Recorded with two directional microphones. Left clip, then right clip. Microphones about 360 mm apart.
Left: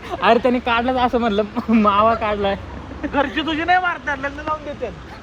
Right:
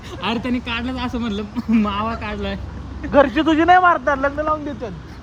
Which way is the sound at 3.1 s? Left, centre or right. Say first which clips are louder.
Right 6 dB; right.